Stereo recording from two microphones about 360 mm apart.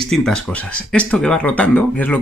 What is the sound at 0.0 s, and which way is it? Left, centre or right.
Speech, centre.